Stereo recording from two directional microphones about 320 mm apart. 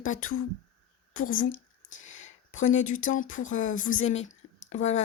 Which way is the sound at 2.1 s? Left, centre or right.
Left.